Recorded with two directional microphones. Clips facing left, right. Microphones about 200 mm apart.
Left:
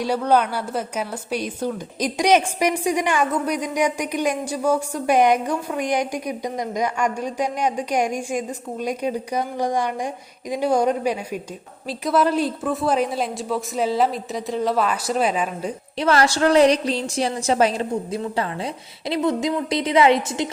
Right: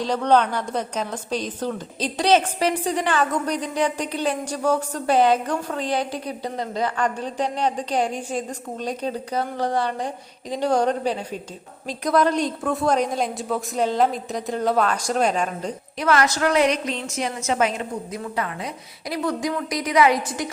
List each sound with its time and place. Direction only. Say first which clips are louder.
0.0 s a woman's voice: even; 10° left (ahead or behind)
16.0 s a woman's voice: left 2 dB; 30° left (ahead or behind)